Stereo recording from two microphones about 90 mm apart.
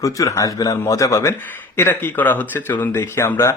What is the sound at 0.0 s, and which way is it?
A man's voice, 35° left (ahead or behind).